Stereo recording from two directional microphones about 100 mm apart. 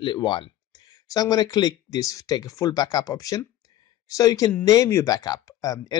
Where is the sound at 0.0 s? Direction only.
50° left (ahead or behind).